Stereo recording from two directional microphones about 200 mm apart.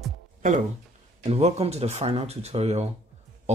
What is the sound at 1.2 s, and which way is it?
Speech, 30° right (ahead or behind).